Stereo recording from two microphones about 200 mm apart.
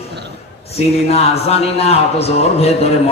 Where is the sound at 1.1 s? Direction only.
30° left (ahead or behind).